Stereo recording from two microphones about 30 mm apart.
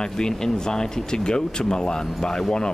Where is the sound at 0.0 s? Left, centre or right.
Left.